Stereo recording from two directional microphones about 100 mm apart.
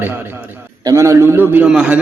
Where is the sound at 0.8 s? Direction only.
30° right (ahead or behind); by 2.0 s 10° right (ahead or behind).